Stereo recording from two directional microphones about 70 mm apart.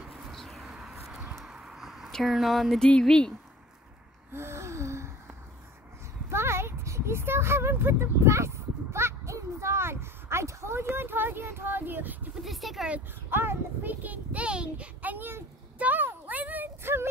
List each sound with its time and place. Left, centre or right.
0.0 s bird: centre
0.4 s a sound: centre
0.7 s bird: centre
1.4 s a sound: centre
2.2 s speech: centre
4.3 s gasp: right
6.3 s speech: right
12.4 s speech: centre
13.3 s a child's voice: right
15.8 s a sound: right